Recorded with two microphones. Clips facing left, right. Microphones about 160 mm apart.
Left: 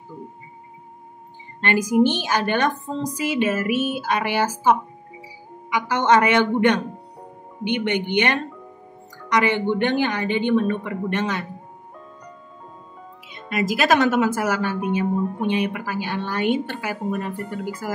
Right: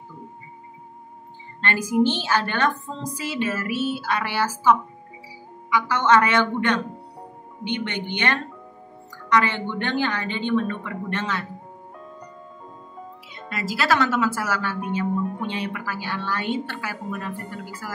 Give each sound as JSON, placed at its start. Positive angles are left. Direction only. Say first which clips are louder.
{"t": 1.6, "sound": "a woman's voice", "louder": "left 3 dB", "side_deg": 15}
{"t": 13.3, "sound": "a woman's voice", "louder": "left 7 dB", "side_deg": 15}